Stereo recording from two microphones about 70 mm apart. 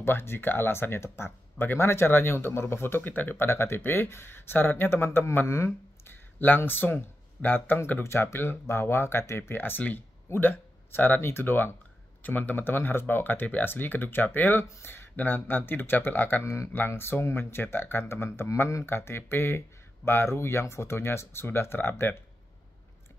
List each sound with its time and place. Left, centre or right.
0.0 s speech: left
6.0 s a sound: left
7.4 s speech: left
8.0 s speech: left
16.4 s speech: left
18.9 s speech: left